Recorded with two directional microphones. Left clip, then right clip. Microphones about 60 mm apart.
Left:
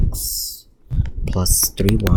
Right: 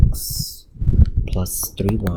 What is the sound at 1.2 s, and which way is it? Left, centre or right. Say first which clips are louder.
Speech: left 7 dB; left.